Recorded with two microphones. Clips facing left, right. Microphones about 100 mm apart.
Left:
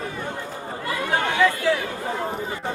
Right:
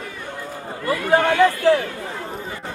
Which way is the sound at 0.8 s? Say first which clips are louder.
Right 7 dB; 40° right (ahead or behind).